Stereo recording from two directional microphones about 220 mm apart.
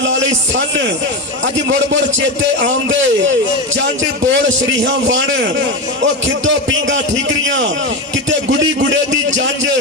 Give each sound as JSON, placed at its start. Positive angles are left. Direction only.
{"t": 0.0, "sound": "a man's voice", "side_deg": -55}